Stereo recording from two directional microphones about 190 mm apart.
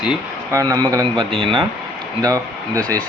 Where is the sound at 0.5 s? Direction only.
20° right (ahead or behind).